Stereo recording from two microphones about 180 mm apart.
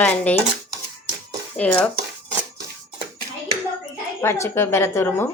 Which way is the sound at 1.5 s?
5° left (ahead or behind).